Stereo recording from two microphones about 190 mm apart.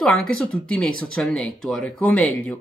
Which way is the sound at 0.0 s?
5° left (ahead or behind).